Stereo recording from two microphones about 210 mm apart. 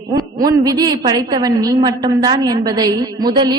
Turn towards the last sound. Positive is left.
turn(degrees=-20)  # may be behind; listen again after turning